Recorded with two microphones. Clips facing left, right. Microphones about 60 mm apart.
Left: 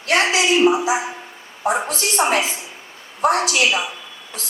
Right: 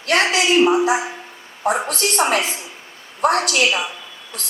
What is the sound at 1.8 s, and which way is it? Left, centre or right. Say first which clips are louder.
Speech: even; right.